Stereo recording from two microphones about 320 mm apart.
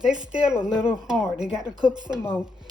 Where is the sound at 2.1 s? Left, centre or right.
Centre.